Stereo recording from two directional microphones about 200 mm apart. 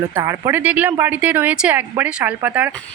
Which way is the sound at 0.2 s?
15° right (ahead or behind).